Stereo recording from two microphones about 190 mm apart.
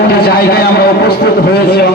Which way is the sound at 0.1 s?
55° left (ahead or behind).